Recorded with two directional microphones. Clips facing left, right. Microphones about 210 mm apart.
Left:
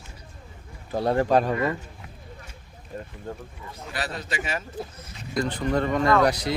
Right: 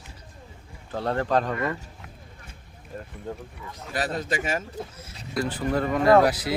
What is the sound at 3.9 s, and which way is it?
Speech, 45° right (ahead or behind).